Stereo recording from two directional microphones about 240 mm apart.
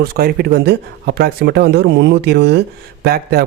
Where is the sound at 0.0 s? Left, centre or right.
Right.